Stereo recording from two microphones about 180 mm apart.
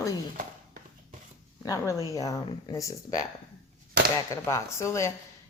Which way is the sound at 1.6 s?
15° left (ahead or behind).